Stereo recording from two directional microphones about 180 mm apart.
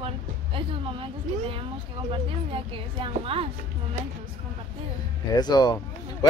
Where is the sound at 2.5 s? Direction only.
30° right (ahead or behind).